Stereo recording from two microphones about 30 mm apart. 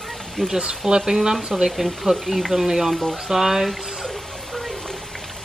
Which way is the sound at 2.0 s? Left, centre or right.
Centre.